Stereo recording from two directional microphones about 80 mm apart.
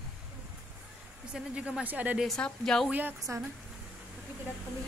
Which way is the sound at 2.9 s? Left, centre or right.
Right.